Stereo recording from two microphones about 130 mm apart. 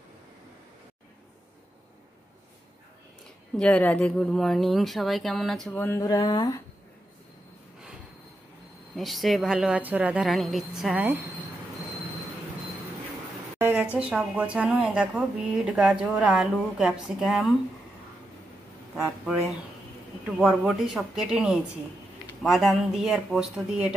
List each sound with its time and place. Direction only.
3.5 s speech: 10° left (ahead or behind)
5.8 s speech: 15° left (ahead or behind)
6.0 s speech: 35° left (ahead or behind)
8.9 s speech: centre (ahead or behind)
13.6 s a sound: 15° right (ahead or behind)
13.9 s speech: 10° right (ahead or behind)
19.0 s speech: 5° right (ahead or behind)